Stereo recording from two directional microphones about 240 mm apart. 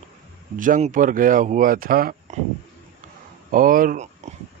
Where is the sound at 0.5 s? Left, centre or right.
Right.